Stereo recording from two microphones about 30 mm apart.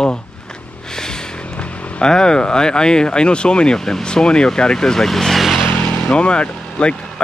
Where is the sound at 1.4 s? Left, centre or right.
Left.